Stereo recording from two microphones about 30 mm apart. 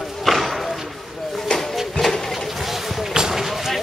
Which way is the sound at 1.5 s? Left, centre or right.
Left.